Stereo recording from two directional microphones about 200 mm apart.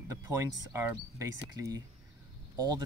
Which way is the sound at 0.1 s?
15° right (ahead or behind).